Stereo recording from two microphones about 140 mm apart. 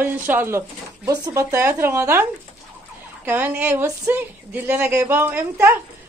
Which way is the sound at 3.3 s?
15° right (ahead or behind).